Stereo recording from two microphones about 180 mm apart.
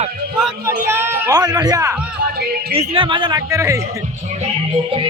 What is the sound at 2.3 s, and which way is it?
Music, 60° right (ahead or behind).